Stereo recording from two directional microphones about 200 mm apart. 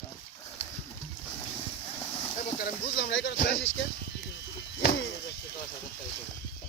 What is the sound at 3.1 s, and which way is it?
Speech, 70° left (ahead or behind).